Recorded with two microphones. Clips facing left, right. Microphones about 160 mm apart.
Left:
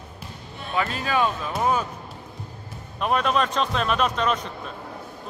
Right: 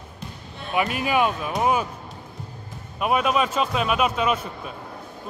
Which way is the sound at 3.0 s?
10° right (ahead or behind).